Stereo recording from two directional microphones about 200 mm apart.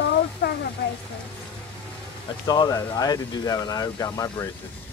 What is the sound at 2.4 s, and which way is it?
Speech, 20° left (ahead or behind).